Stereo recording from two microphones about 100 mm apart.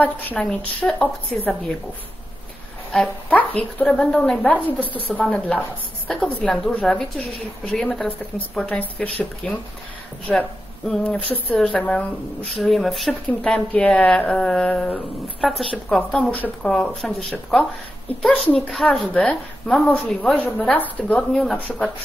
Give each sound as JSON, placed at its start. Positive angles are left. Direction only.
{"t": 0.0, "sound": "a woman's voice", "side_deg": 15}
{"t": 2.9, "sound": "a woman's voice", "side_deg": 15}
{"t": 15.4, "sound": "speech", "side_deg": 0}
{"t": 16.3, "sound": "a woman's voice", "side_deg": 15}
{"t": 16.6, "sound": "a woman's voice", "side_deg": 5}